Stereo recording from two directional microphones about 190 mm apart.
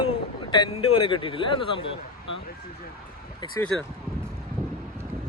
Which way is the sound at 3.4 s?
25° left (ahead or behind).